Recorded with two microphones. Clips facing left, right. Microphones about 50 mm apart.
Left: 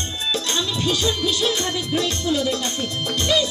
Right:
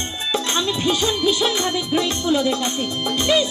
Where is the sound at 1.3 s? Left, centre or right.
Right.